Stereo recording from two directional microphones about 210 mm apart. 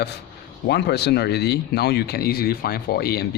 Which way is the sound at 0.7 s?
50° left (ahead or behind).